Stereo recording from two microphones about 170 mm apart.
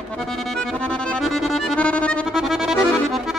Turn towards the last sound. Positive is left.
turn(degrees=0)  # may be behind; listen again after turning